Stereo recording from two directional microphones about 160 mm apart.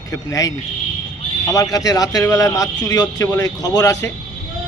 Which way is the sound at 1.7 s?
20° left (ahead or behind).